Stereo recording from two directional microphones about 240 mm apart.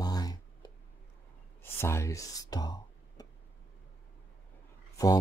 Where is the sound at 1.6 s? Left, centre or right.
Centre.